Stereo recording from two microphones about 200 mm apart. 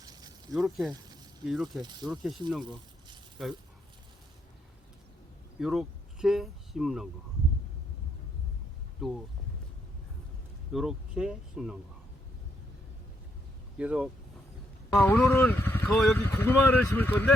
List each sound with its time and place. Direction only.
0.0 s a sound: 20° right (ahead or behind)
0.5 s speech: centre (ahead or behind)
1.8 s speech: 20° right (ahead or behind)
2.0 s speech: centre (ahead or behind)
5.5 s speech: centre (ahead or behind)
9.0 s speech: centre (ahead or behind)
10.7 s speech: centre (ahead or behind)
13.7 s speech: 5° right (ahead or behind)
15.0 s speech: 10° left (ahead or behind)